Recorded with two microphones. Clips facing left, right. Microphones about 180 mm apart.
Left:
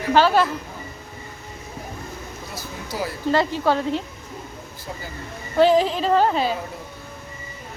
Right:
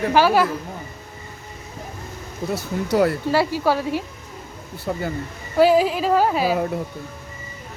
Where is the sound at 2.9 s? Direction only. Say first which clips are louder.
Right 10 dB; 60° right (ahead or behind).